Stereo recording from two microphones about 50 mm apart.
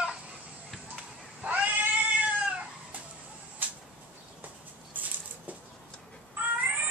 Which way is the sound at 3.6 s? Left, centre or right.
Right.